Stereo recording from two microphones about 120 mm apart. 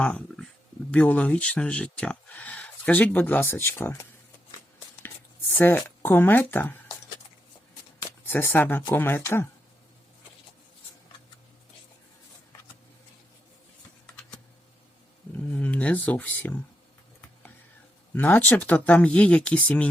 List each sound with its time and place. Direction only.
0.0 s speech: 5° left (ahead or behind); by 4.0 s 20° left (ahead or behind)
5.0 s speech: 15° left (ahead or behind)
8.3 s speech: 15° left (ahead or behind)
15.5 s a sound: 10° left (ahead or behind)
18.1 s speech: 15° left (ahead or behind)